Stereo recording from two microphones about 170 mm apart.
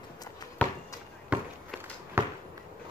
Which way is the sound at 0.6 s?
10° left (ahead or behind).